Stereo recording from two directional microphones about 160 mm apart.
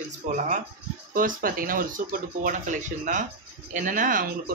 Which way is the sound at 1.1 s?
60° right (ahead or behind).